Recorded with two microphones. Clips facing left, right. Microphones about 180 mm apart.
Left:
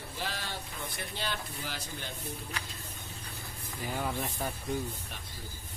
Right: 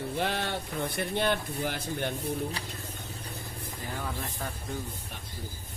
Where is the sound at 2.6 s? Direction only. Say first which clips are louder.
Right 3 dB; 35° right (ahead or behind).